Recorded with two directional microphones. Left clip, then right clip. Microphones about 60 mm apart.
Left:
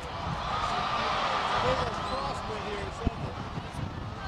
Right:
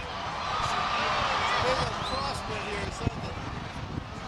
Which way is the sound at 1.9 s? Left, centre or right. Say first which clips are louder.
Right 1 dB; right.